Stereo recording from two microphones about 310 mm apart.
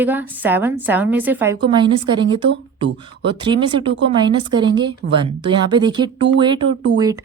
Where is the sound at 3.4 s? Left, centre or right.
Centre.